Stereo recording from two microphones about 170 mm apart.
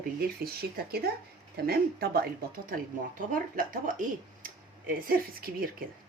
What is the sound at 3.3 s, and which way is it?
Speech, 55° right (ahead or behind).